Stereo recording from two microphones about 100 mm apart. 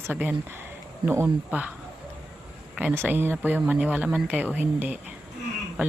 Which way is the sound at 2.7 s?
20° right (ahead or behind).